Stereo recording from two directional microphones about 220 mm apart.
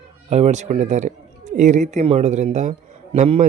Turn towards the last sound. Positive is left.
turn(degrees=-30)  # may be behind; listen again after turning